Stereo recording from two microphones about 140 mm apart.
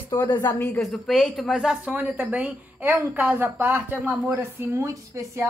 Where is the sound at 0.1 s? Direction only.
30° left (ahead or behind).